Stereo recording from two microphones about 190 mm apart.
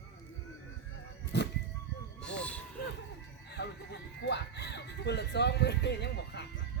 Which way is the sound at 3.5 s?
60° left (ahead or behind).